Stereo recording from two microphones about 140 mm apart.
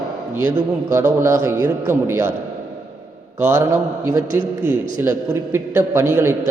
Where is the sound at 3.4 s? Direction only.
20° right (ahead or behind).